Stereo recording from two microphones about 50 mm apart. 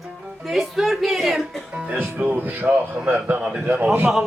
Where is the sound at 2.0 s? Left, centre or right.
Right.